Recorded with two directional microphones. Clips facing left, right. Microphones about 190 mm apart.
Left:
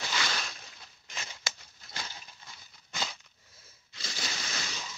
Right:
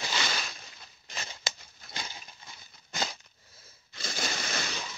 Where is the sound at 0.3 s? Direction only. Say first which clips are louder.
Right 1 dB; 5° right (ahead or behind).